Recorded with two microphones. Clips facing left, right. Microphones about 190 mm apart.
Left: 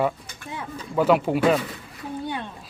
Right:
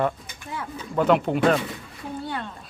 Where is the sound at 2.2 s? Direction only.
15° left (ahead or behind).